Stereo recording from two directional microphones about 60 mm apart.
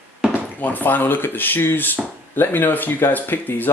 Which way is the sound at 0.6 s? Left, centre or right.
Left.